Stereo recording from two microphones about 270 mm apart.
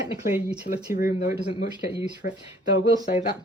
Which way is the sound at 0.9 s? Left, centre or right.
Left.